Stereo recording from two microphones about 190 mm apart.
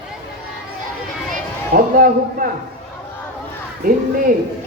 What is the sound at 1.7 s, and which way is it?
Speech, 50° right (ahead or behind).